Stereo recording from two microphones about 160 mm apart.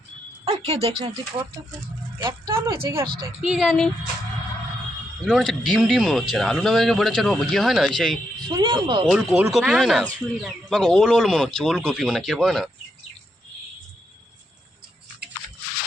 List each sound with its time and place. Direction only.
0.4 s speech: 40° right (ahead or behind)
2.5 s speech: 15° right (ahead or behind)
3.4 s speech: centre (ahead or behind)
5.2 s speech: centre (ahead or behind)
8.5 s speech: 30° right (ahead or behind)
9.0 s speech: 5° right (ahead or behind)